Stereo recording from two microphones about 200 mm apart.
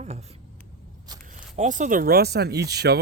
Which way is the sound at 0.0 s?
35° right (ahead or behind).